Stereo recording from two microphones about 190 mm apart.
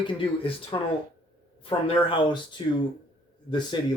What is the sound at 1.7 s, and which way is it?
Speech, 25° left (ahead or behind).